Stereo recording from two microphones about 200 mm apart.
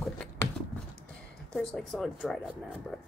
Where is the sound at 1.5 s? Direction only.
5° left (ahead or behind).